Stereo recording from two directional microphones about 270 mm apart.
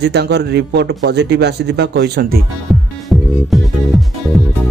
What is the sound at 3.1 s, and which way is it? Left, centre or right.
Music, centre.